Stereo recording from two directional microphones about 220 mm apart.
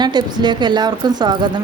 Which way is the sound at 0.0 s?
20° right (ahead or behind).